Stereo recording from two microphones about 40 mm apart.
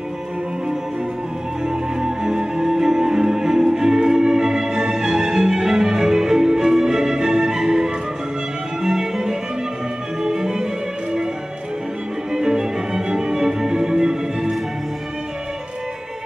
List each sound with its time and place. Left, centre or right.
1.7 s music: centre
12.3 s music: centre